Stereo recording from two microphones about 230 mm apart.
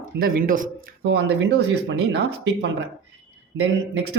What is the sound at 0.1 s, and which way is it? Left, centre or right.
Speech, right.